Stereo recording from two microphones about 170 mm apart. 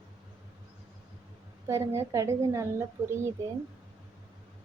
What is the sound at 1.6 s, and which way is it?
A woman's voice, 15° right (ahead or behind).